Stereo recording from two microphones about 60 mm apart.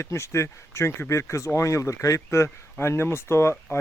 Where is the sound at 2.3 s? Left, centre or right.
Left.